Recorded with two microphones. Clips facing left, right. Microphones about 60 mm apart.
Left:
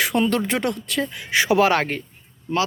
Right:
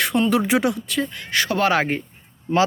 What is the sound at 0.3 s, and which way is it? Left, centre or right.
Speech, centre.